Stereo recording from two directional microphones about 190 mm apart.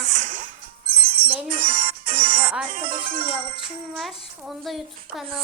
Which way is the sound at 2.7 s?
45° right (ahead or behind).